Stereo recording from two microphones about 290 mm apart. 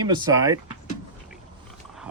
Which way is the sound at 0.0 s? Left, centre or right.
Centre.